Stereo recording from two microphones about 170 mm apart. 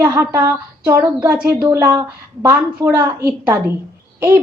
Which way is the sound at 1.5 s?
20° right (ahead or behind).